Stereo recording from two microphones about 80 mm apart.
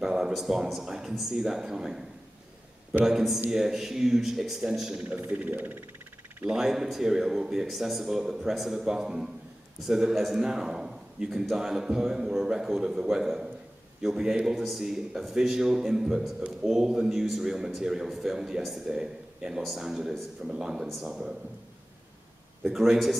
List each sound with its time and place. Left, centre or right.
0.0 s speech: centre
3.1 s a man's voice: centre
5.1 s speech: right
6.5 s a man's voice: centre
22.7 s speech: centre